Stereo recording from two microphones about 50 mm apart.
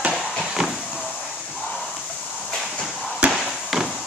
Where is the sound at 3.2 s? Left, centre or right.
Right.